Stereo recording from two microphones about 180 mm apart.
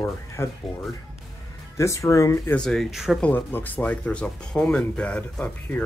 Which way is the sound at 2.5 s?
Centre (ahead or behind).